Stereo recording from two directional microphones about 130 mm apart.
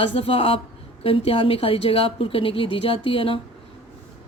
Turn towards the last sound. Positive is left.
turn(degrees=45)  # may be behind; listen again after turning